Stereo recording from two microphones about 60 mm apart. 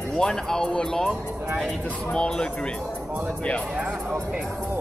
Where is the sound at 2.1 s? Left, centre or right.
Centre.